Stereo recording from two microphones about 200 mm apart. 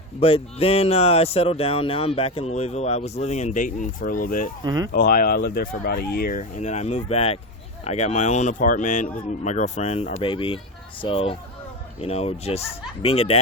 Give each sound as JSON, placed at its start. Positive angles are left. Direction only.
{"t": 0.2, "sound": "speech", "side_deg": 30}
{"t": 4.6, "sound": "speech", "side_deg": -20}
{"t": 4.9, "sound": "speech", "side_deg": 45}